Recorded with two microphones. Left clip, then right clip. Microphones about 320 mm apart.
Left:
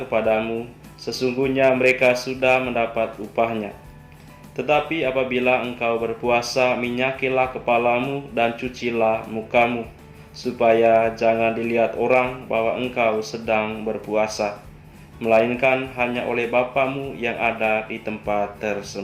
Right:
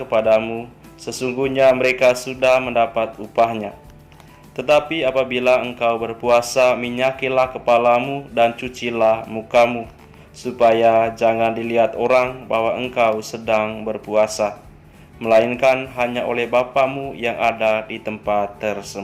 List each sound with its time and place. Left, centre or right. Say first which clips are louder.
0.1 s speech: right 5 dB; right